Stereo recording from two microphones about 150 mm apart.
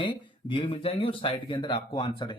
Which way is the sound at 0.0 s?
30° left (ahead or behind).